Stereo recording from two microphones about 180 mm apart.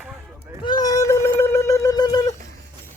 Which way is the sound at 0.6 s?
20° left (ahead or behind).